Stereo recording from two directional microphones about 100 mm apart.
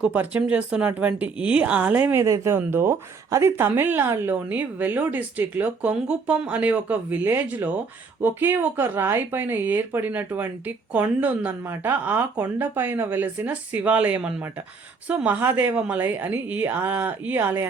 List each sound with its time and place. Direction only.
0.0 s a woman's voice: 15° right (ahead or behind)
2.2 s a woman's voice: 30° right (ahead or behind)